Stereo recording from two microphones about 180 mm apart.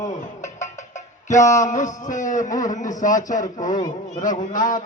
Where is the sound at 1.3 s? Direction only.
45° left (ahead or behind).